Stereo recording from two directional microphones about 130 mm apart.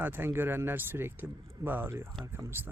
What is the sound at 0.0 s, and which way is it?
Speech, 15° right (ahead or behind).